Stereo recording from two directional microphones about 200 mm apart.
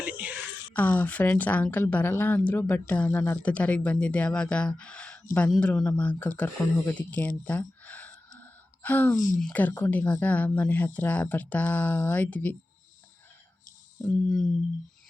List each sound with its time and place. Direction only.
0.0 s a sound: 5° right (ahead or behind)
0.7 s speech: 10° left (ahead or behind)
9.1 s speech: 40° left (ahead or behind)
9.4 s speech: 10° left (ahead or behind)
14.0 s speech: 5° left (ahead or behind)